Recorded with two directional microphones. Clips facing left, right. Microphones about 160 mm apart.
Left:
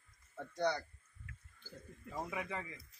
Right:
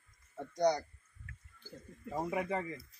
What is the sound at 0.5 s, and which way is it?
Speech, 40° right (ahead or behind).